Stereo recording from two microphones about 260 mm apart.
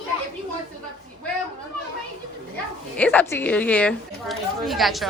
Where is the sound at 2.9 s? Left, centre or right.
Centre.